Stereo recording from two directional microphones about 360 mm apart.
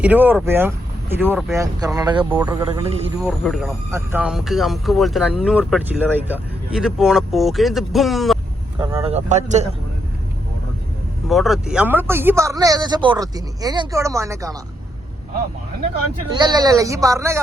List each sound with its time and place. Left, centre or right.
0.0 s speech: centre
3.2 s speech: centre
8.8 s speech: centre
11.3 s speech: centre
16.4 s speech: centre